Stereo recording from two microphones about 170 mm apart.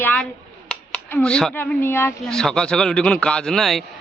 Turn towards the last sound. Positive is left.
turn(degrees=0)  # may be behind; listen again after turning